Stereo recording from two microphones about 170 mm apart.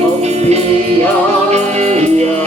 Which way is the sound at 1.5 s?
40° right (ahead or behind).